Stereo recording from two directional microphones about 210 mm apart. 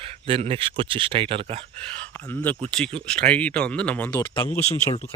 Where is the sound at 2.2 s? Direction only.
10° left (ahead or behind).